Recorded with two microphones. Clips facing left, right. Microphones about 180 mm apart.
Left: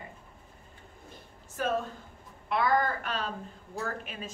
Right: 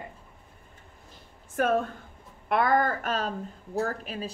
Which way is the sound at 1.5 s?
55° right (ahead or behind).